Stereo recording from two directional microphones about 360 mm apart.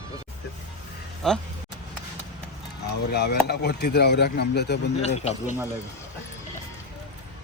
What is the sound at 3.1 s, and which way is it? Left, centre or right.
Speech, left.